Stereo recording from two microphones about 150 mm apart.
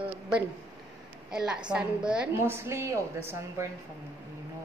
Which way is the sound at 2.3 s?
20° right (ahead or behind).